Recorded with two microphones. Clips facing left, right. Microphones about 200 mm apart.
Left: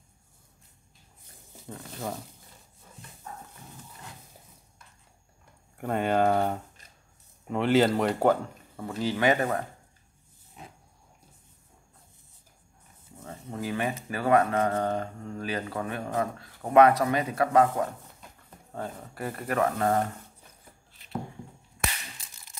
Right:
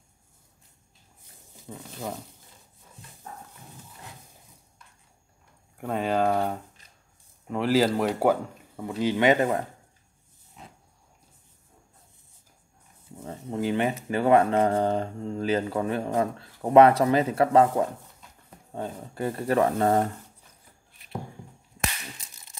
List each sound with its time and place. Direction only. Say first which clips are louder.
1.7 s speech: even; 5° right (ahead or behind)
5.8 s speech: even; centre (ahead or behind); by 9.6 s 20° right (ahead or behind)
13.2 s a sound: right 6 dB; 30° right (ahead or behind)
14.0 s speech: right 3 dB; 25° right (ahead or behind)